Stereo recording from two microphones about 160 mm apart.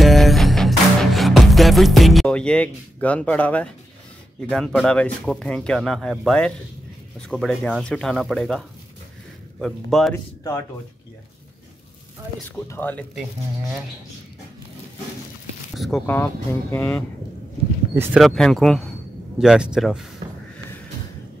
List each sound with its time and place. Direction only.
0.0 s music: centre (ahead or behind)
4.5 s speech: 5° left (ahead or behind)
10.1 s speech: 15° left (ahead or behind)
12.4 s speech: 15° left (ahead or behind)
13.1 s speech: 5° right (ahead or behind)
15.8 s speech: centre (ahead or behind)
16.7 s speech: 15° left (ahead or behind)
17.9 s speech: 15° right (ahead or behind)
18.2 s speech: centre (ahead or behind)